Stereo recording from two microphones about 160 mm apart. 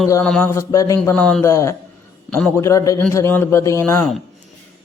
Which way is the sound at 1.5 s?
15° left (ahead or behind).